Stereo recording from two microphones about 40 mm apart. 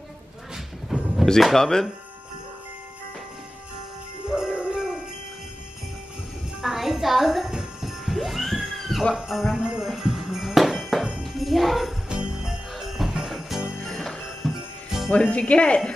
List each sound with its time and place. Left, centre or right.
0.8 s a sound: centre
1.4 s speech: centre
4.3 s jingle bell: centre
6.6 s music: centre
9.3 s jingle bell: centre
9.6 s jingle bell: right
9.8 s music: centre
11.2 s speech: centre
12.1 s jingle bell: right
12.4 s jingle bell: centre
13.8 s jingle bell: centre
15.0 s speech: left